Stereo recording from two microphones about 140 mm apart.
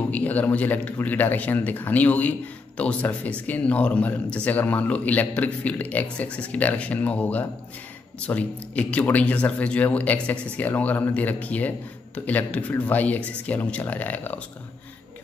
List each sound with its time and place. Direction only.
0.1 s speech: 10° left (ahead or behind)